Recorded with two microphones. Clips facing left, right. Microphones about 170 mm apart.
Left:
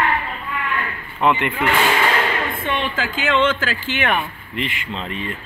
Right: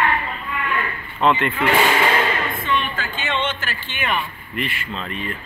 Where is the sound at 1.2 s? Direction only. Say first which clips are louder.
Even; 15° left (ahead or behind).